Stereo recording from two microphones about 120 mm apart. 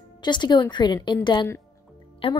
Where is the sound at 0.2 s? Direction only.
40° left (ahead or behind).